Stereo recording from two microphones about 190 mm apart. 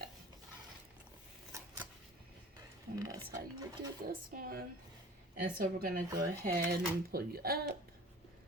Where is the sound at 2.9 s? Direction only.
20° right (ahead or behind).